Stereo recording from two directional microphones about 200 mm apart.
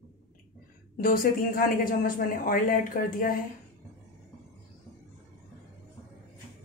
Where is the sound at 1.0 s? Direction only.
45° left (ahead or behind).